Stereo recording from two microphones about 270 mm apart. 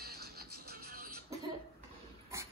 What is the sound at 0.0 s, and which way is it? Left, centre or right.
Music, right.